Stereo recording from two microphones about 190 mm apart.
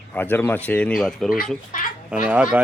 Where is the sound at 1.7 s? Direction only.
45° left (ahead or behind).